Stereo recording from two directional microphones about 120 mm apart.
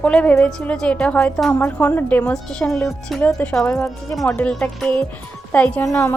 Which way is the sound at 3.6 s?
25° left (ahead or behind).